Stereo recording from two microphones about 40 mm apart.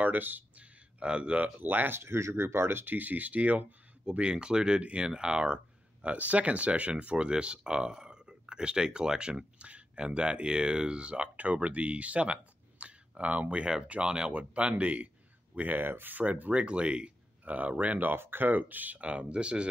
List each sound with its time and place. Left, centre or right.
0.0 s speech: right
0.6 s a sound: right
1.4 s speech: right
2.0 s speech: right
6.0 s speech: right
14.0 s speech: right
14.3 s speech: right
16.5 s speech: right
17.5 s speech: right
18.2 s speech: right
18.5 s speech: right
18.9 s speech: right